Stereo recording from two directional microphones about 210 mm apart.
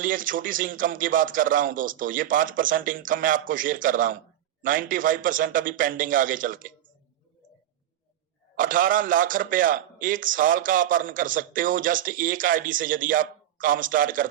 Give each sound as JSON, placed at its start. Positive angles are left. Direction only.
{"t": 0.0, "sound": "a man's voice", "side_deg": -40}
{"t": 8.5, "sound": "a man's voice", "side_deg": -40}